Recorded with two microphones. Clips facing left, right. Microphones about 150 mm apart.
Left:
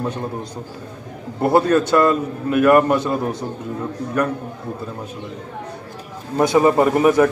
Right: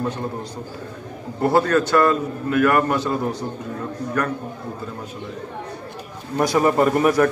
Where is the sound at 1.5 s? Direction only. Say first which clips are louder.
Left 3 dB; 20° left (ahead or behind).